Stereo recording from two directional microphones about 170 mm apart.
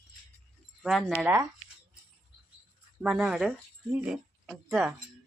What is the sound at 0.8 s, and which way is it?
Speech, centre (ahead or behind).